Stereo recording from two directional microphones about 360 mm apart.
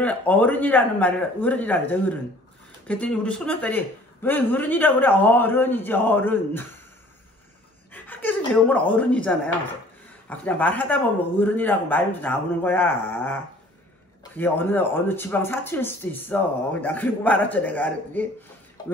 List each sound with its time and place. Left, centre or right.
0.0 s speech: centre
7.9 s speech: centre